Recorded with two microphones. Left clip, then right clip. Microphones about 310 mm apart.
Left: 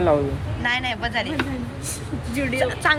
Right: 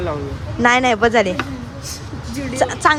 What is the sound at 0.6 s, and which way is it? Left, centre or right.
Speech, centre.